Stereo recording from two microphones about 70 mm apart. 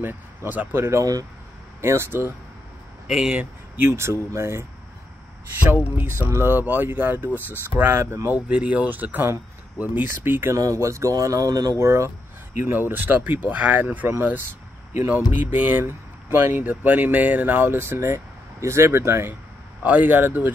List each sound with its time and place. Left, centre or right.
0.5 s speech: right
0.7 s speech: right
3.1 s speech: centre
3.3 s speech: right
5.7 s speech: right
8.5 s speech: centre
10.5 s speech: right
11.8 s speech: right
12.6 s speech: right
19.8 s speech: right